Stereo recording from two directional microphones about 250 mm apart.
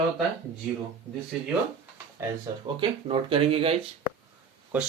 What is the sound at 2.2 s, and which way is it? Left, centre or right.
Speech, centre.